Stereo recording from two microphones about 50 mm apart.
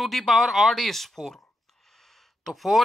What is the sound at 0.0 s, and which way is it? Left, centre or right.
Speech, centre.